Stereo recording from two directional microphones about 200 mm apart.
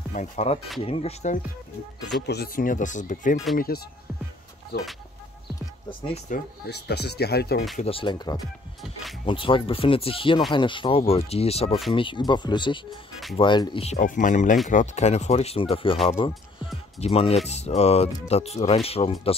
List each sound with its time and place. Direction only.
0.1 s speech: 35° left (ahead or behind)
2.2 s speech: 50° left (ahead or behind)
5.9 s speech: 30° left (ahead or behind)
6.7 s speech: 55° left (ahead or behind)
7.7 s speech: 30° left (ahead or behind)
13.9 s speech: 40° left (ahead or behind)
17.0 s speech: 30° left (ahead or behind)